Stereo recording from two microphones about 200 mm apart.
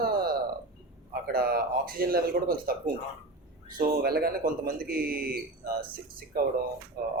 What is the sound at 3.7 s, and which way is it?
Speech, 45° right (ahead or behind).